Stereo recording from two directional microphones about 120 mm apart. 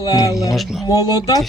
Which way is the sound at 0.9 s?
30° left (ahead or behind).